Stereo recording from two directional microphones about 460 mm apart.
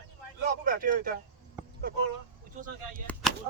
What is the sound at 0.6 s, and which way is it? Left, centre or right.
Speech, centre.